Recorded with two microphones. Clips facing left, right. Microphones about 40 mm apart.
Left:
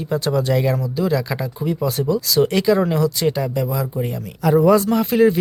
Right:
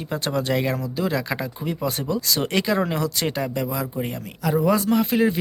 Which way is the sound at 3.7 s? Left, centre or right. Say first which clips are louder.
Left 4 dB; right.